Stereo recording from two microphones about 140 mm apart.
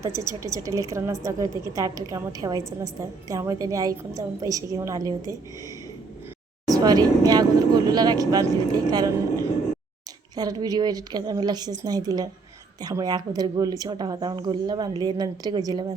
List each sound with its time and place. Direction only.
0.0 s a woman's voice: 20° right (ahead or behind)
6.7 s a woman's voice: 25° right (ahead or behind)